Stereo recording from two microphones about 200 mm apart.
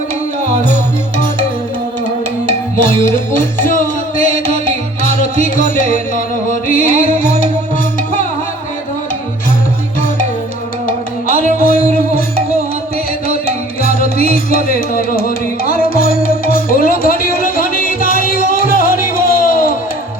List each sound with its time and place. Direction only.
0.4 s music: 45° left (ahead or behind)
2.5 s music: 40° left (ahead or behind)
10.8 s music: 45° left (ahead or behind)
13.8 s music: 45° left (ahead or behind)